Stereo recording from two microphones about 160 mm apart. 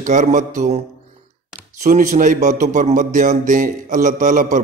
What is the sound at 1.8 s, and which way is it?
A man's voice, 55° right (ahead or behind).